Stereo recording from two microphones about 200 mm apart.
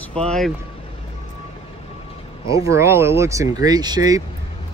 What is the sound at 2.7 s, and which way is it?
Speech, 15° right (ahead or behind).